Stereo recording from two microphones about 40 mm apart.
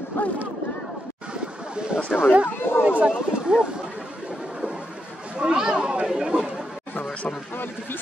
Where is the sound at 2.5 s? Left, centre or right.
Left.